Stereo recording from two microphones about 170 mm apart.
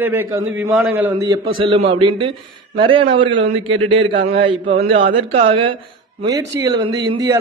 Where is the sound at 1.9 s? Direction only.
30° right (ahead or behind).